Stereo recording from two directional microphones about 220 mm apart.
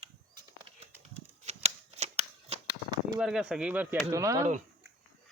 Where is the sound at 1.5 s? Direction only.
30° right (ahead or behind).